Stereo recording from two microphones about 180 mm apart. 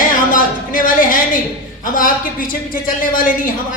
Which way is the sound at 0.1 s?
50° left (ahead or behind).